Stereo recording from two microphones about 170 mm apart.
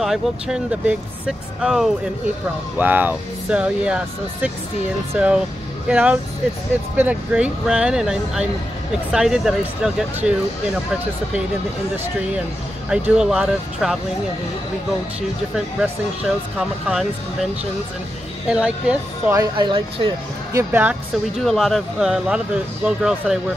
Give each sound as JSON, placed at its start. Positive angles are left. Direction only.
{"t": 0.0, "sound": "speech", "side_deg": -5}
{"t": 12.9, "sound": "speech", "side_deg": -5}
{"t": 15.5, "sound": "speech", "side_deg": -5}
{"t": 18.5, "sound": "speech", "side_deg": -5}
{"t": 19.5, "sound": "speech", "side_deg": -30}
{"t": 20.5, "sound": "speech", "side_deg": -10}
{"t": 21.5, "sound": "speech", "side_deg": 0}